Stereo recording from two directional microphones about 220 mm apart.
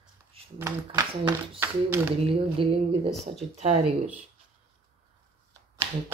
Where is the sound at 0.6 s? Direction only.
10° right (ahead or behind).